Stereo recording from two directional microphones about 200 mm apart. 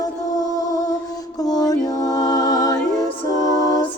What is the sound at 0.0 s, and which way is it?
Music, 20° left (ahead or behind).